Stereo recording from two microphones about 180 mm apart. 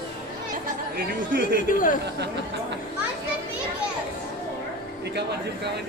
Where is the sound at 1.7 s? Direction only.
50° left (ahead or behind).